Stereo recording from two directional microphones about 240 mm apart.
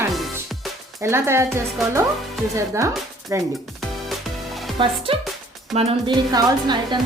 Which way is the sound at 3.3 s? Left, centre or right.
Centre.